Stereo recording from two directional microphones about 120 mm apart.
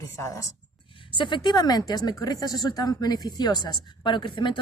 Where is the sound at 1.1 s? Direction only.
40° left (ahead or behind).